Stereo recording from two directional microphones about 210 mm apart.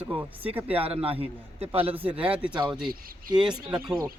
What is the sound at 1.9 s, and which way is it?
Speech, 5° right (ahead or behind).